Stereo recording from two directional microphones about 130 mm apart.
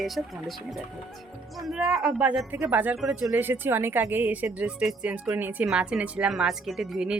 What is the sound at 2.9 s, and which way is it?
Speech, centre (ahead or behind).